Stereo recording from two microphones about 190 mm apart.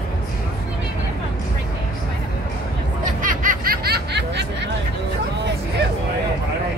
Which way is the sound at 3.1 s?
45° right (ahead or behind).